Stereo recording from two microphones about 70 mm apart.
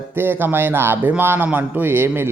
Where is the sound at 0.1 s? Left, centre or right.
Right.